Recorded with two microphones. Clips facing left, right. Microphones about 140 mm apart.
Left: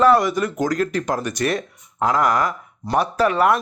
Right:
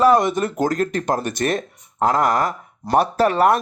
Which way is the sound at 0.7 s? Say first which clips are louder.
Right 1 dB; 50° right (ahead or behind).